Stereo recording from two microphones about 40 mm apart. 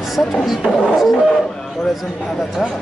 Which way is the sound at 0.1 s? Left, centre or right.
Centre.